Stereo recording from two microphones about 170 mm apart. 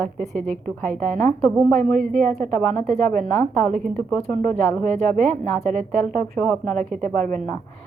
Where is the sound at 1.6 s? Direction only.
45° right (ahead or behind).